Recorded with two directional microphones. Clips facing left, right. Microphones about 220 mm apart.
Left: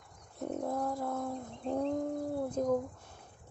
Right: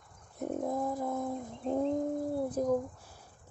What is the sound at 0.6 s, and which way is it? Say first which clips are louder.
Bird: right 1 dB; 20° right (ahead or behind).